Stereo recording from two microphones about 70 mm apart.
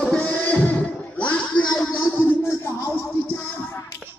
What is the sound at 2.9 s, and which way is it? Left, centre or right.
Music, left.